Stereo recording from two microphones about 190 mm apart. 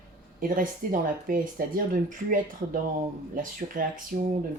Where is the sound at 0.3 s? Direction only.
45° right (ahead or behind).